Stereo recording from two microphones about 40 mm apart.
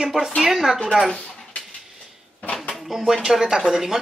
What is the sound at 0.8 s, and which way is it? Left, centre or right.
Speech, centre.